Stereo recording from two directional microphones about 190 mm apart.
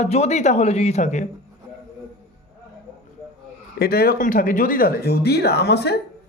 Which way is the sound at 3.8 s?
55° left (ahead or behind).